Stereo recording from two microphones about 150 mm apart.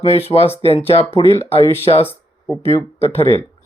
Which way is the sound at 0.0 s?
45° left (ahead or behind).